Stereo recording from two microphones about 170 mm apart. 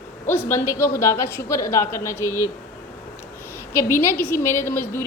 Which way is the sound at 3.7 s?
15° left (ahead or behind).